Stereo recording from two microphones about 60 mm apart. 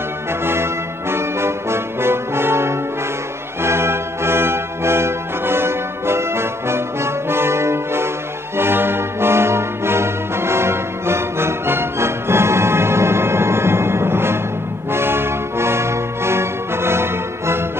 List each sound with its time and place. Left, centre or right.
0.3 s music: right
1.1 s brass instrument: right
3.6 s music: right
8.5 s brass instrument: right
14.9 s music: right